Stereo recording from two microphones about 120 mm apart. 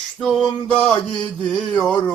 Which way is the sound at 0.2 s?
Centre (ahead or behind).